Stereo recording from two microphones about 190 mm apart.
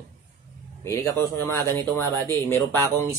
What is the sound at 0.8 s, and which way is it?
Speech, 15° left (ahead or behind).